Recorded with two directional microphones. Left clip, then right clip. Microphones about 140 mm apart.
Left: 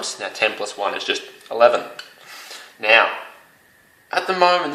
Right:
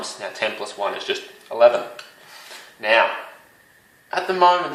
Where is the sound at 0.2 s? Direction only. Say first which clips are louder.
Left 4 dB; 50° left (ahead or behind).